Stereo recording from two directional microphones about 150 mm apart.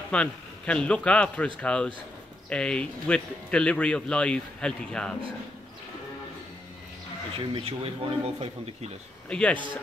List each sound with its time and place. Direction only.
0.1 s speech: 5° left (ahead or behind)
7.3 s speech: 40° right (ahead or behind)
9.3 s speech: 5° left (ahead or behind)